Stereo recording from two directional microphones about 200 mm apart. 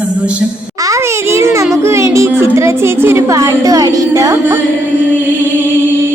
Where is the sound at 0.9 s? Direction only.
15° right (ahead or behind).